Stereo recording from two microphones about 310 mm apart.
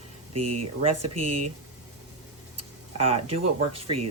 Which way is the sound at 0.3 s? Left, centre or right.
Right.